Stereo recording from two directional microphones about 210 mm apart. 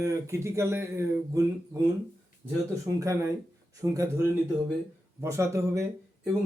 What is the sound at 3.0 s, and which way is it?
Speech, 15° right (ahead or behind).